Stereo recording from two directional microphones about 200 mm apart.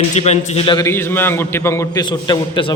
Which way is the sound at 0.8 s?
10° left (ahead or behind).